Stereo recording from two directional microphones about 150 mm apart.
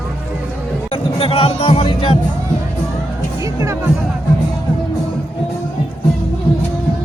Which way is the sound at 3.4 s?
20° right (ahead or behind).